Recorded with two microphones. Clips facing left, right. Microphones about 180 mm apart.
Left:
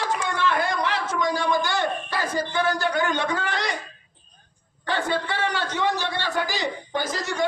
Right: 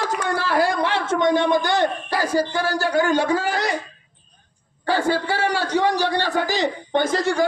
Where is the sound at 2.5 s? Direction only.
35° right (ahead or behind).